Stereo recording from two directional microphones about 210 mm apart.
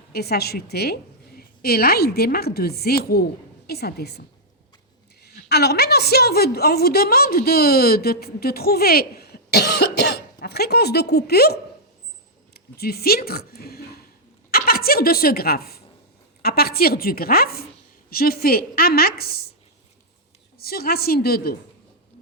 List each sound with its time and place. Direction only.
0.1 s a woman's voice: 50° left (ahead or behind)
14.5 s a sound: 45° left (ahead or behind)
16.4 s a woman's voice: 45° left (ahead or behind)
20.6 s a woman's voice: 45° left (ahead or behind)